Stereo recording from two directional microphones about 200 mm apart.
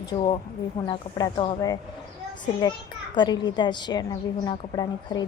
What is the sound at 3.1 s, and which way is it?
A woman's voice, 20° left (ahead or behind).